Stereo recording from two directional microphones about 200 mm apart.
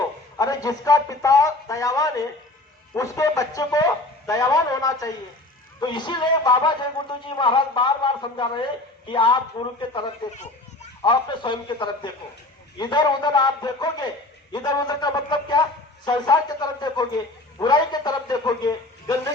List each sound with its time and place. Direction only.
0.3 s a man's voice: 20° left (ahead or behind)